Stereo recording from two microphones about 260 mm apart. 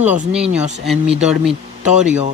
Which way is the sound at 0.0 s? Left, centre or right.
Right.